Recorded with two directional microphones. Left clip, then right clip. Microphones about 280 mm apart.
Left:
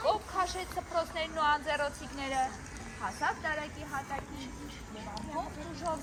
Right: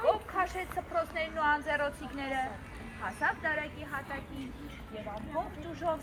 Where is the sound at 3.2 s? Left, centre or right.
Centre.